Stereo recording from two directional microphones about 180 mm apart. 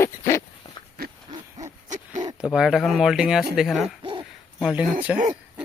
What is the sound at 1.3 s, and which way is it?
Hoot, 20° right (ahead or behind).